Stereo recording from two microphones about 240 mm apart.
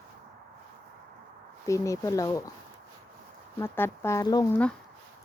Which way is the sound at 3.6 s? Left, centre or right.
Centre.